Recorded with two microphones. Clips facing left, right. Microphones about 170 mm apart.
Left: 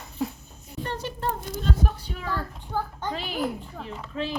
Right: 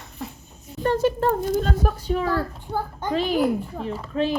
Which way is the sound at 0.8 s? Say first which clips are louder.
Right 10 dB; 45° right (ahead or behind).